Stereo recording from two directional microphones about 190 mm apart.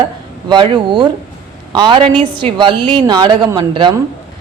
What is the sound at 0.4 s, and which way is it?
Speech, 25° right (ahead or behind).